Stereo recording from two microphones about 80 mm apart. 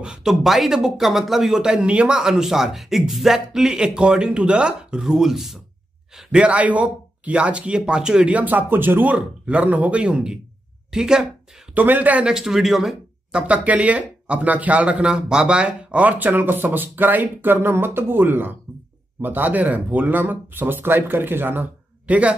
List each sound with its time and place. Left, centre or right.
0.0 s speech: centre; by 9.1 s right
9.1 s speech: centre
11.7 s speech: right